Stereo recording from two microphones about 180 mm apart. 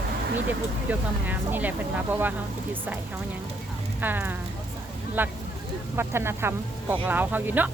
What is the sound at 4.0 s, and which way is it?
Speech, 10° right (ahead or behind).